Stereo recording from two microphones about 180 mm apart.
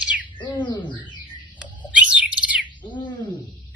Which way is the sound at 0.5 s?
25° left (ahead or behind).